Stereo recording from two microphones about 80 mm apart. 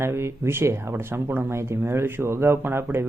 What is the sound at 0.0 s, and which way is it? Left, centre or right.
Speech, right.